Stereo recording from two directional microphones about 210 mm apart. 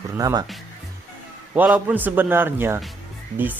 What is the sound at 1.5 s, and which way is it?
Speech, 5° right (ahead or behind).